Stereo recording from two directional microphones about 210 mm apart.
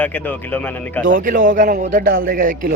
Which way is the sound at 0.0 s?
10° left (ahead or behind).